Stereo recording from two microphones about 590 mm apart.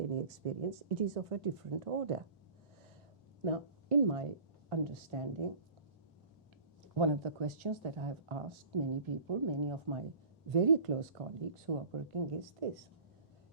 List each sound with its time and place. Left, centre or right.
0.1 s speech: right
3.4 s speech: right
6.9 s speech: right
10.5 s speech: right